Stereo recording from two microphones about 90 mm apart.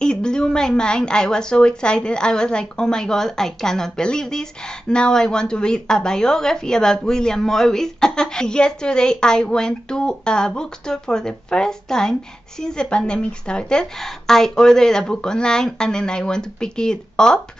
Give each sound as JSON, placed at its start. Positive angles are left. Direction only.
{"t": 0.0, "sound": "a woman's voice", "side_deg": 10}